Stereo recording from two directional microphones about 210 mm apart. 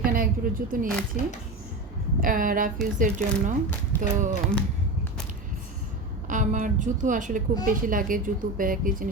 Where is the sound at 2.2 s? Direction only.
40° right (ahead or behind).